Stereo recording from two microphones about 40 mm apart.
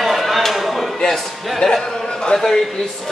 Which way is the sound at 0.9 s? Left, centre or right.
Centre.